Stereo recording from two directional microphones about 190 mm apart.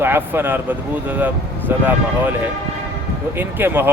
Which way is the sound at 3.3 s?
10° right (ahead or behind).